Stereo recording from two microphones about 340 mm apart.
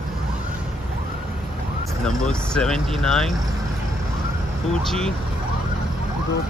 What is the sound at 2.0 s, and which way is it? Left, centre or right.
Speech, centre.